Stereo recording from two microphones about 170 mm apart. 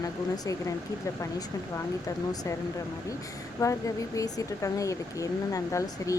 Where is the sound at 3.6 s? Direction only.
20° left (ahead or behind).